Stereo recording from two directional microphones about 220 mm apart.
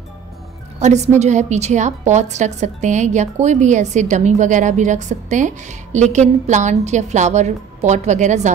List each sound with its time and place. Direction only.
0.7 s a woman's voice: 30° right (ahead or behind)